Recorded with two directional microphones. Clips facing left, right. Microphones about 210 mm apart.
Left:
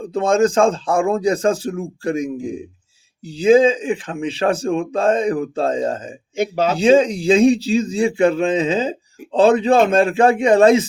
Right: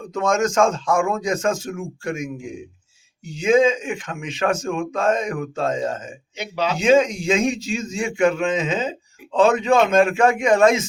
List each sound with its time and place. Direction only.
0.0 s a man's voice: 30° left (ahead or behind)
6.3 s speech: 50° left (ahead or behind)
6.7 s a man's voice: 35° left (ahead or behind)